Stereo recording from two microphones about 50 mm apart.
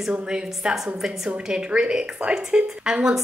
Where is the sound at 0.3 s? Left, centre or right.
Centre.